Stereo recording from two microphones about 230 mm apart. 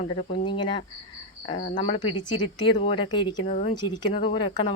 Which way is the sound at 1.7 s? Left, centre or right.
Left.